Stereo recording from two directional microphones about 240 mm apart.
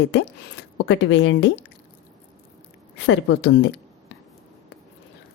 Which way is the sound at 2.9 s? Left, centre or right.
Left.